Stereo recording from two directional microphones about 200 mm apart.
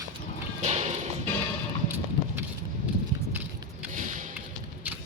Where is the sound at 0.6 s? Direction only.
35° right (ahead or behind).